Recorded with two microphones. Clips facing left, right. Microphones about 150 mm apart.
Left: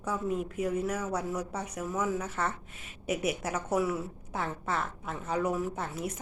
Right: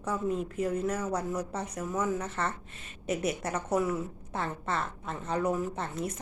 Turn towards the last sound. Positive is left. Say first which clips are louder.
# right 1 dB
turn(degrees=5)  # may be behind; listen again after turning